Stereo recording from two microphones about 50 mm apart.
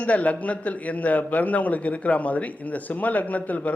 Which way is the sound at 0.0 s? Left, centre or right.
Left.